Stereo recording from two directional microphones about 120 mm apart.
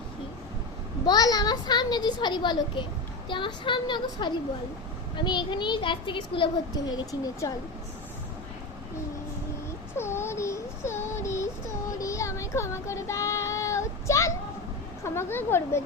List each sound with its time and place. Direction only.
1.0 s a child's voice: 35° left (ahead or behind)
6.9 s a woman's voice: 30° left (ahead or behind)
10.0 s child singing: 20° left (ahead or behind)
15.0 s a woman's voice: 20° left (ahead or behind)